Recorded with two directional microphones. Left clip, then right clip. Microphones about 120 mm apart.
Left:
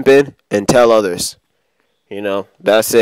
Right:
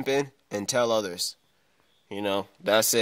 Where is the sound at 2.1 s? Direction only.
55° left (ahead or behind); by 2.9 s 75° left (ahead or behind).